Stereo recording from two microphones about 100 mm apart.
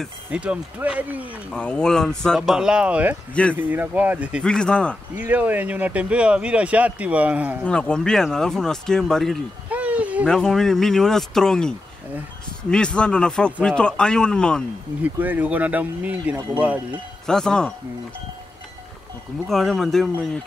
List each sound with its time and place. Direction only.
0.3 s speech: 10° right (ahead or behind)
1.5 s speech: 10° left (ahead or behind); by 4.4 s 15° right (ahead or behind)
4.4 s speech: 10° left (ahead or behind)
5.1 s speech: 15° right (ahead or behind)
7.6 s speech: 10° left (ahead or behind)
9.7 s a sound: 15° right (ahead or behind)
10.2 s speech: 5° left (ahead or behind)
15.1 s speech: 15° right (ahead or behind)
17.3 s speech: 5° left (ahead or behind)
19.4 s speech: centre (ahead or behind)